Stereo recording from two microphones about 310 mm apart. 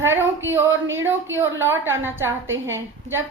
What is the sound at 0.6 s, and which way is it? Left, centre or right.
A woman's voice, right.